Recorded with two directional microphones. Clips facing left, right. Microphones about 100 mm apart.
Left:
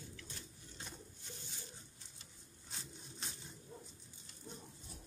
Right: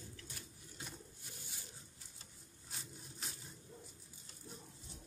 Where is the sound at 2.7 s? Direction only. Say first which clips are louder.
Even; 5° right (ahead or behind).